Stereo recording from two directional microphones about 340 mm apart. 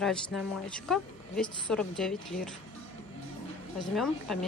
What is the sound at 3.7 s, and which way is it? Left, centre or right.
Speech, centre.